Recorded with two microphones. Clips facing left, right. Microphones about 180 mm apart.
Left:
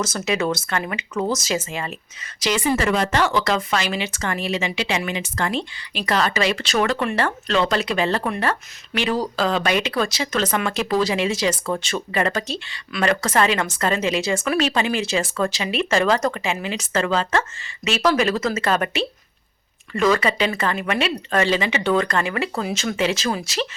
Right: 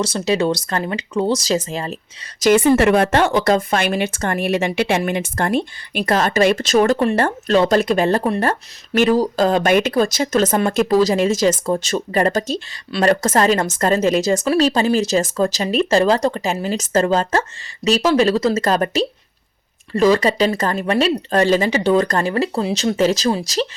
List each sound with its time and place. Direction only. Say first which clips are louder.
0.0 s speech: right 4 dB; 30° right (ahead or behind)
2.4 s a woman's voice: right 8 dB; 55° right (ahead or behind)
18.0 s speech: right 3 dB; 30° right (ahead or behind)